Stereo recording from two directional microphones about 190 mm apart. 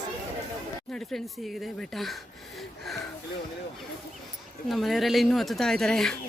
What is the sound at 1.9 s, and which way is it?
Speech, centre (ahead or behind).